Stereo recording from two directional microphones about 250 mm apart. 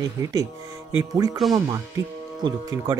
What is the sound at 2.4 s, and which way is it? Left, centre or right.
Speech, centre.